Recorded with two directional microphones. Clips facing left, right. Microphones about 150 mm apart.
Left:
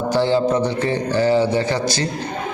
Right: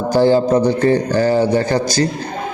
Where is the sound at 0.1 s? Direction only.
45° right (ahead or behind).